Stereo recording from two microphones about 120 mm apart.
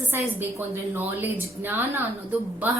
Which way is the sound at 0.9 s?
15° right (ahead or behind).